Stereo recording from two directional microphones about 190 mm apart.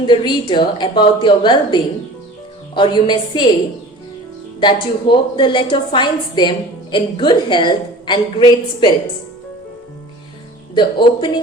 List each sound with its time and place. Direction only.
0.0 s a woman's voice: 25° left (ahead or behind)
4.6 s a woman's voice: 25° left (ahead or behind)
10.8 s a woman's voice: 25° left (ahead or behind)